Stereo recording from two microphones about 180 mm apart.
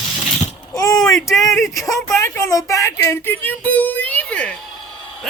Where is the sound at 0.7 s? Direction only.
20° left (ahead or behind).